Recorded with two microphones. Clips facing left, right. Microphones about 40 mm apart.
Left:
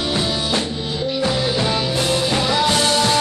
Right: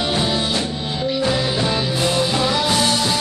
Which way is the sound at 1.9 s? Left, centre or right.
Centre.